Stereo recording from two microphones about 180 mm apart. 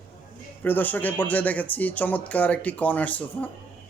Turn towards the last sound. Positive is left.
turn(degrees=10)  # may be behind; listen again after turning